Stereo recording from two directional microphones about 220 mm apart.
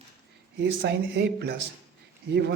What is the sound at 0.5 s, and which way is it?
Speech, 45° right (ahead or behind).